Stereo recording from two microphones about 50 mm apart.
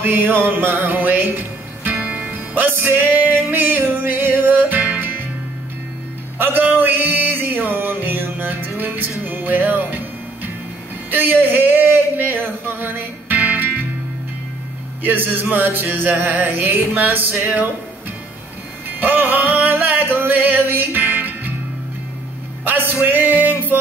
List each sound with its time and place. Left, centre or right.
0.1 s music: right
6.3 s music: right
11.1 s speech: right
15.0 s music: right
18.9 s music: right
22.7 s music: right